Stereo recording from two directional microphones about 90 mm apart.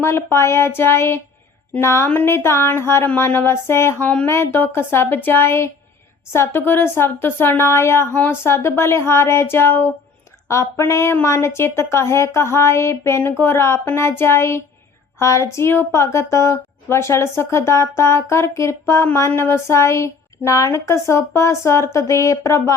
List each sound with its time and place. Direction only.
0.0 s a woman's voice: 25° left (ahead or behind)